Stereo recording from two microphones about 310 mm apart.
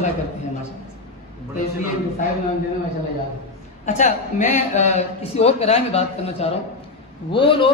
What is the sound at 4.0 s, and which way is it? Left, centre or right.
A man's voice, left.